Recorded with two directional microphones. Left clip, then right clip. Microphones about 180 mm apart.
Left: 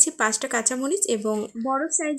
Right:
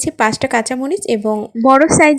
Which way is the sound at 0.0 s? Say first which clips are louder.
Right 8 dB; 25° right (ahead or behind).